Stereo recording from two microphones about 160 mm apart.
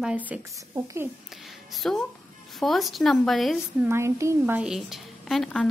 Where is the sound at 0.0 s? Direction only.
10° right (ahead or behind).